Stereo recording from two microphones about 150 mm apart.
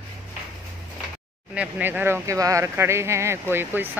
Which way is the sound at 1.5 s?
10° right (ahead or behind).